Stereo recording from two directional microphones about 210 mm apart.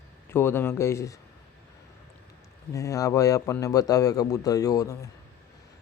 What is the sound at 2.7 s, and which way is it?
Speech, 15° left (ahead or behind).